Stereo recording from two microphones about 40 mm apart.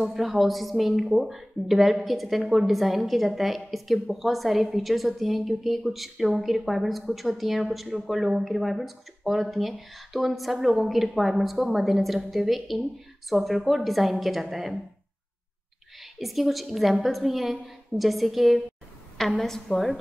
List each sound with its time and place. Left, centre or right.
0.0 s a woman's voice: centre
16.0 s a woman's voice: centre
19.4 s a woman's voice: centre